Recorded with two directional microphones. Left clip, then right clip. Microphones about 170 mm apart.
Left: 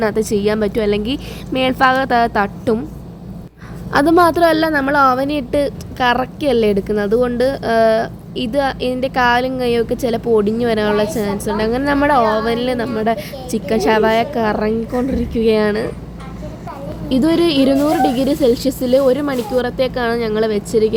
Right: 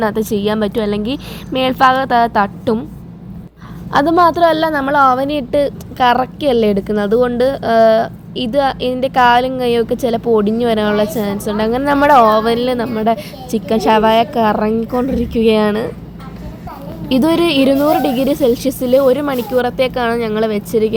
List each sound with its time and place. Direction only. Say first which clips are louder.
0.0 s a woman's voice: even; 10° right (ahead or behind)
3.9 s a woman's voice: right 1 dB; 5° right (ahead or behind)
17.1 s a woman's voice: right 2 dB; 25° right (ahead or behind)